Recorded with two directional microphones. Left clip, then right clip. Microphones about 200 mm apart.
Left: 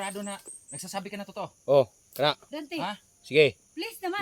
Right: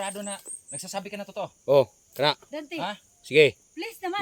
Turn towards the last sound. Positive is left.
turn(degrees=0)  # may be behind; listen again after turning